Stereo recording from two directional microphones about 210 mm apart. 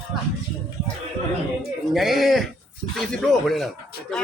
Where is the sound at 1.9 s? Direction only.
Centre (ahead or behind).